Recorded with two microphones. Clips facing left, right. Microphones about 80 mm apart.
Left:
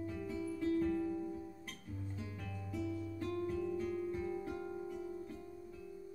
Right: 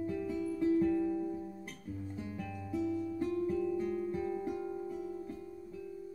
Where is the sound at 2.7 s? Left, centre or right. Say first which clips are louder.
Right 6 dB; right.